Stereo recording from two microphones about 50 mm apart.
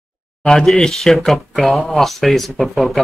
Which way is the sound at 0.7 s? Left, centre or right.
Centre.